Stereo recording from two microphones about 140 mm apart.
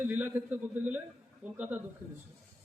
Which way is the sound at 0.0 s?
15° right (ahead or behind).